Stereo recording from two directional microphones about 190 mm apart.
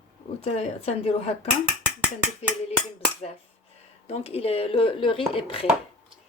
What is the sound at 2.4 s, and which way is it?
Speech, 35° left (ahead or behind).